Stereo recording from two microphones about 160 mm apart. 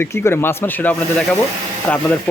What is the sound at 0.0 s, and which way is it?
Speech, 15° left (ahead or behind).